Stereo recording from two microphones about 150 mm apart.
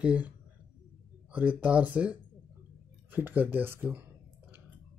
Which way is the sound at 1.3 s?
10° right (ahead or behind).